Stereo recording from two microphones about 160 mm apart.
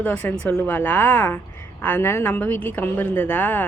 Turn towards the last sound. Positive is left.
turn(degrees=10)  # may be behind; listen again after turning